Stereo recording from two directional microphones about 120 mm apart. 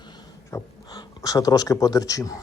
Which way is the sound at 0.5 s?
30° left (ahead or behind).